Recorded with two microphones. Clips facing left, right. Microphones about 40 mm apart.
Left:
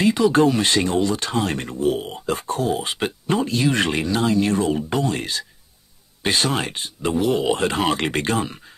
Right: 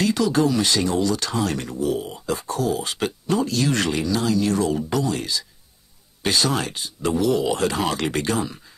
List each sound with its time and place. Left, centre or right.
0.0 s speech: left
0.3 s speech: left
3.9 s speech: left
5.0 s speech: left